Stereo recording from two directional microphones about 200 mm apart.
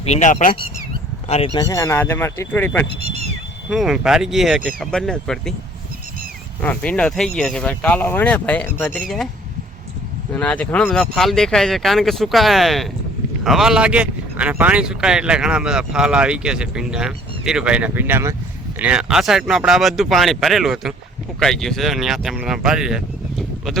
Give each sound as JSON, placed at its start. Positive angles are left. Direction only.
{"t": 0.0, "sound": "speech", "side_deg": 35}
{"t": 1.5, "sound": "speech", "side_deg": 15}
{"t": 3.7, "sound": "speech", "side_deg": 0}
{"t": 6.6, "sound": "speech", "side_deg": 5}
{"t": 10.4, "sound": "speech", "side_deg": 5}